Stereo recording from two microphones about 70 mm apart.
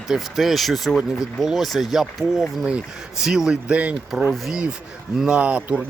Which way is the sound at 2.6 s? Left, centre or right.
Centre.